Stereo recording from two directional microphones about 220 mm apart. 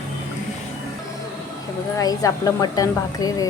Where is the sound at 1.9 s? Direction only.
15° left (ahead or behind).